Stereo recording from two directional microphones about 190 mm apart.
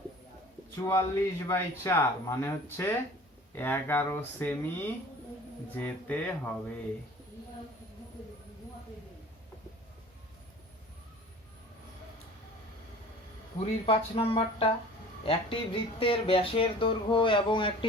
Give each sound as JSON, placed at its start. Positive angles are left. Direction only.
{"t": 0.8, "sound": "speech", "side_deg": 15}
{"t": 5.7, "sound": "speech", "side_deg": 10}
{"t": 13.6, "sound": "speech", "side_deg": 30}